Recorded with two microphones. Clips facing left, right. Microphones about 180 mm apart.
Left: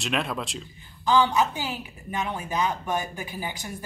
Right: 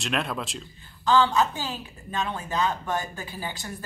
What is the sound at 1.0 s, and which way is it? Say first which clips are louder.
A woman's voice: even; 15° left (ahead or behind).